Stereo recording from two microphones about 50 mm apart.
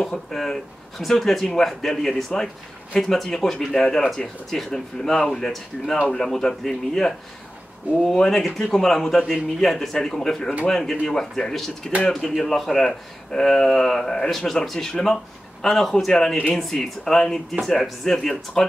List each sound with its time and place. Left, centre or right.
0.0 s speech: centre